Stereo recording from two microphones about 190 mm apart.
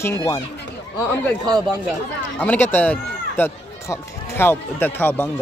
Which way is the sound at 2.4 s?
10° left (ahead or behind).